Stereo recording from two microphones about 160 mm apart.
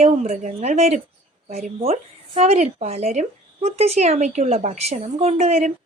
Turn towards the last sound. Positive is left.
turn(degrees=-45)  # may be behind; listen again after turning